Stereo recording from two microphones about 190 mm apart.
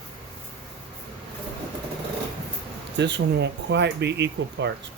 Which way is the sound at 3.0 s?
65° right (ahead or behind).